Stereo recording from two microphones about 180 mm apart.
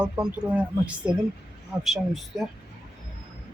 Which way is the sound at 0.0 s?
5° right (ahead or behind).